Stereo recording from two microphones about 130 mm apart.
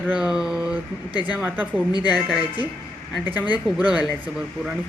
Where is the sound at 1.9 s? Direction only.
35° left (ahead or behind).